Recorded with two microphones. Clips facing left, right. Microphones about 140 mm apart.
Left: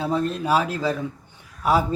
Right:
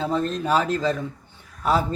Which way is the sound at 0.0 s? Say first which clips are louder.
Even; 10° left (ahead or behind).